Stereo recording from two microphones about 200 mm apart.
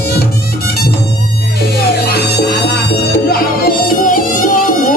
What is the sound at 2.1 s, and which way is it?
Music, 55° left (ahead or behind).